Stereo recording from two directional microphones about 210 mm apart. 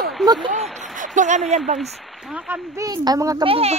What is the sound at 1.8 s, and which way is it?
Speech, centre (ahead or behind).